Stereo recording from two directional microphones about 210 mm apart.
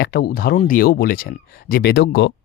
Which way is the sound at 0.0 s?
50° left (ahead or behind).